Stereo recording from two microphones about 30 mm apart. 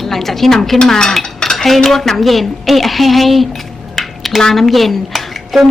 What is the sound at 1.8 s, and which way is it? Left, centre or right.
A woman's voice, centre.